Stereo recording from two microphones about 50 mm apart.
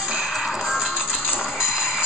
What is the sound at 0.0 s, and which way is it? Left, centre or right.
Music, centre.